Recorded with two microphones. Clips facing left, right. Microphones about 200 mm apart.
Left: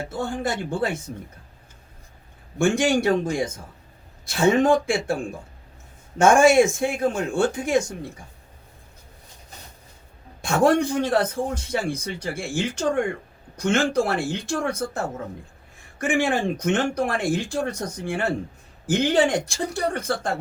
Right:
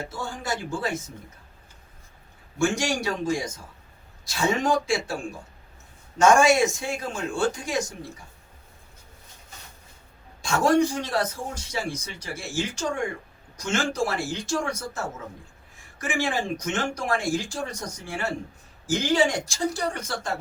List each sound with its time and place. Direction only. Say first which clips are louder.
0.1 s a man's voice: left 5 dB; 55° left (ahead or behind)
2.6 s a man's voice: left 5 dB; 55° left (ahead or behind)
6.1 s a man's voice: left 3 dB; 55° left (ahead or behind)
10.4 s a man's voice: left 2 dB; 60° left (ahead or behind)